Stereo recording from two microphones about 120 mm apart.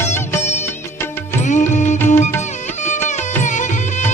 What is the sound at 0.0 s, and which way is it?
Music, 20° left (ahead or behind).